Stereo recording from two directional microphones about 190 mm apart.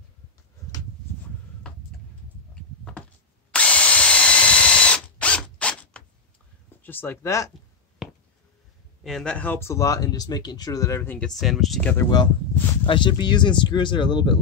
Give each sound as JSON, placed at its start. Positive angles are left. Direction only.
{"t": 3.5, "sound": "drill", "side_deg": 5}
{"t": 6.8, "sound": "speech", "side_deg": 10}
{"t": 8.0, "sound": "a sound", "side_deg": 0}
{"t": 9.0, "sound": "speech", "side_deg": 5}
{"t": 11.9, "sound": "speech", "side_deg": 15}